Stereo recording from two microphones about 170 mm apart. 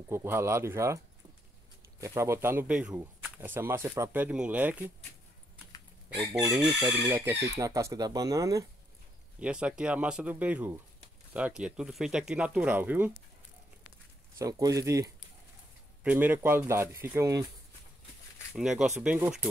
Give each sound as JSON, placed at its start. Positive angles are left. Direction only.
{"t": 0.1, "sound": "speech", "side_deg": -15}
{"t": 6.2, "sound": "speech", "side_deg": -20}
{"t": 9.4, "sound": "speech", "side_deg": -5}
{"t": 14.4, "sound": "speech", "side_deg": -20}
{"t": 18.5, "sound": "speech", "side_deg": -5}